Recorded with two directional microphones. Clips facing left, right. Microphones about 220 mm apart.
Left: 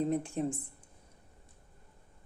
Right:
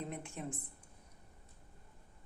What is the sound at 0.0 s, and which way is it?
Speech, 35° left (ahead or behind).